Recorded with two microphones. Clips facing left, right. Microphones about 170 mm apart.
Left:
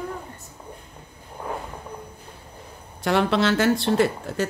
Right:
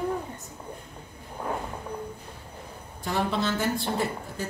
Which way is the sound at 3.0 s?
80° left.